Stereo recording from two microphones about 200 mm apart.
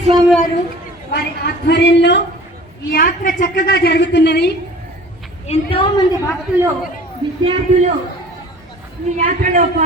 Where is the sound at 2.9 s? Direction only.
45° left (ahead or behind).